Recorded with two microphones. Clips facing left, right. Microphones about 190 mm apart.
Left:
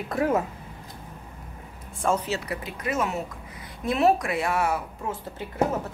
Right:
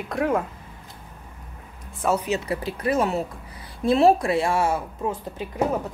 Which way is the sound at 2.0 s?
10° right (ahead or behind).